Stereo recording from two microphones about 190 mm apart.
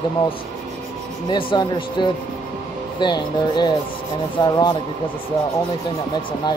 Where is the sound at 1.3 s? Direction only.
25° left (ahead or behind).